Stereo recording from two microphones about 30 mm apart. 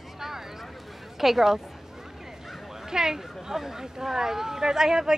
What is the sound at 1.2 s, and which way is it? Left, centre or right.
Speech, centre.